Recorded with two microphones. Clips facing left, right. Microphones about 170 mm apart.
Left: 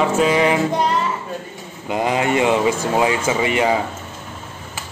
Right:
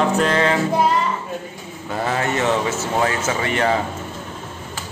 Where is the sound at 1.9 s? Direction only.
15° left (ahead or behind).